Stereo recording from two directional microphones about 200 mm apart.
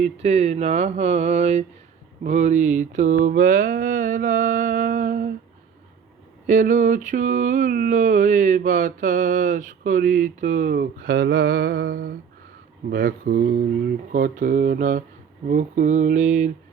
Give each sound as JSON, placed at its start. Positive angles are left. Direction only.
{"t": 0.0, "sound": "mantra", "side_deg": -35}
{"t": 6.5, "sound": "mantra", "side_deg": -40}